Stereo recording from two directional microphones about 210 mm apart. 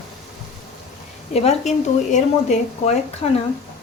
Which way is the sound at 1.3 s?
30° left (ahead or behind).